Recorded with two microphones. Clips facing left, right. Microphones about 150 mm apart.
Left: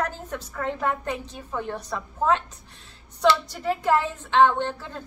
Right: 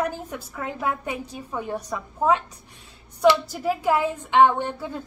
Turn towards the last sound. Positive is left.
turn(degrees=-10)  # may be behind; listen again after turning